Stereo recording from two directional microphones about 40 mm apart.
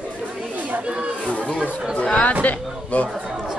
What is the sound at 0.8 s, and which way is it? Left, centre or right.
Chatter, right.